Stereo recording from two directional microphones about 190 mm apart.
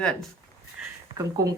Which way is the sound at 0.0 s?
5° left (ahead or behind).